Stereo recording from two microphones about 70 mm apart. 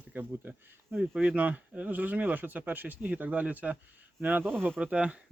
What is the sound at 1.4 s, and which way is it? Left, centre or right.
Speech, right.